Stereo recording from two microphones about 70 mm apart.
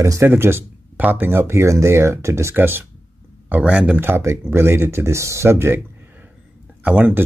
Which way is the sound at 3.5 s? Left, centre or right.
Centre.